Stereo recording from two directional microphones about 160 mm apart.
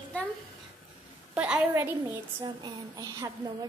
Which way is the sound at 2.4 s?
25° right (ahead or behind).